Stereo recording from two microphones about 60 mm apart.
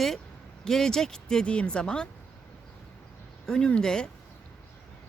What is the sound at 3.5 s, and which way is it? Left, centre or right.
Speech, centre.